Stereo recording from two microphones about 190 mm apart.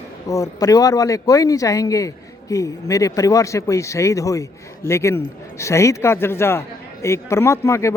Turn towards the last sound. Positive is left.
turn(degrees=15)  # may be behind; listen again after turning